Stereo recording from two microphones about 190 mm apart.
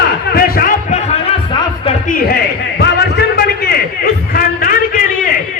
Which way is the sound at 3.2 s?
60° left (ahead or behind).